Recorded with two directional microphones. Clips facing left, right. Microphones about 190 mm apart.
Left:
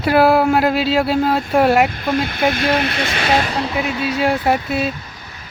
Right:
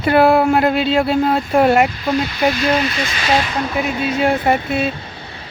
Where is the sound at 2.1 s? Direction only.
55° left (ahead or behind).